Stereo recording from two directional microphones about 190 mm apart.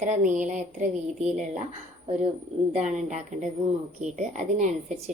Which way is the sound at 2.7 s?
40° right (ahead or behind).